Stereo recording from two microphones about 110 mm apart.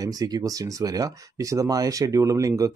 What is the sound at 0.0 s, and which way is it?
Speech, 35° right (ahead or behind).